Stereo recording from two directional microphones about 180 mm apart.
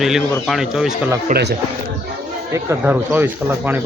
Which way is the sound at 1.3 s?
65° right (ahead or behind).